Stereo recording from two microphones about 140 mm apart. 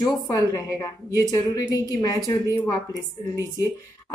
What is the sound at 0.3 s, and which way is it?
A woman's voice, 25° left (ahead or behind).